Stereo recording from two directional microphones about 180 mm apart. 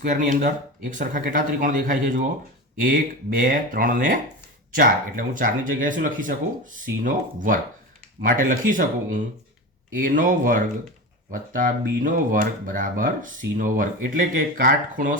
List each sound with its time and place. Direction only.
0.0 s speech: 45° right (ahead or behind)